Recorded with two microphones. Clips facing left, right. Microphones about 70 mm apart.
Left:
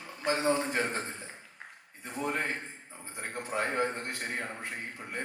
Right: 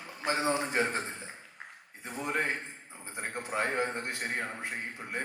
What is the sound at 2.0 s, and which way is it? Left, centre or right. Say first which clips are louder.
A man's voice: right 1 dB; right.